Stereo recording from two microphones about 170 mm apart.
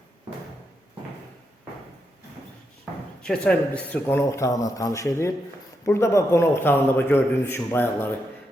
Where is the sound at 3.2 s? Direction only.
5° left (ahead or behind).